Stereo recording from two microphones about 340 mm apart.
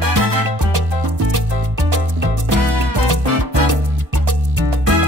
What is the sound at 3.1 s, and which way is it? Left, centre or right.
Music, right.